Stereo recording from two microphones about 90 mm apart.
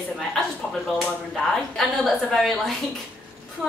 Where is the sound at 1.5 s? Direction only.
Centre (ahead or behind).